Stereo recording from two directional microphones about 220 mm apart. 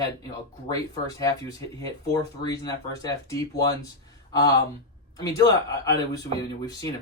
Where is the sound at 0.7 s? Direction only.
15° left (ahead or behind).